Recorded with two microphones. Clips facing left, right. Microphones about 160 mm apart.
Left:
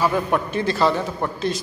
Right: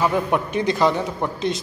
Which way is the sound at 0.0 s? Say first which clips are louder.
Even; 15° right (ahead or behind).